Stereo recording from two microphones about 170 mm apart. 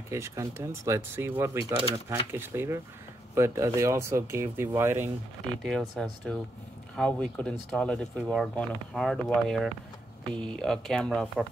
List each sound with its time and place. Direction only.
0.1 s speech: 15° right (ahead or behind)
5.6 s speech: centre (ahead or behind)